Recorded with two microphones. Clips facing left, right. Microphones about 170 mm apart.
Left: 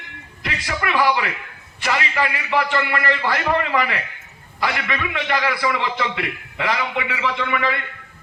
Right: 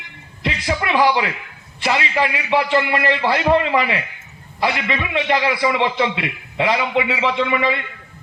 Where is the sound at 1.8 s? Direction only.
20° right (ahead or behind).